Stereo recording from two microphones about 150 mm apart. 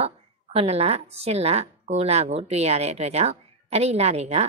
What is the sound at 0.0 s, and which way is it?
Speech, 45° right (ahead or behind).